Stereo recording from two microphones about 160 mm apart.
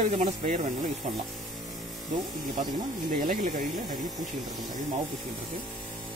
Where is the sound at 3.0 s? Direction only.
55° right (ahead or behind).